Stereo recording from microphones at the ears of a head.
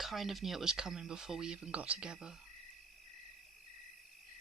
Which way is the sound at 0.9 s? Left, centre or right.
Right.